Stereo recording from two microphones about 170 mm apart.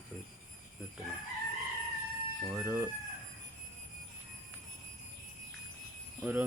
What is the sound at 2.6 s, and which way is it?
Speech, 10° right (ahead or behind).